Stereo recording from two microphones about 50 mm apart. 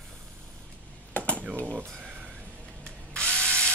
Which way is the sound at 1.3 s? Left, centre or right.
Right.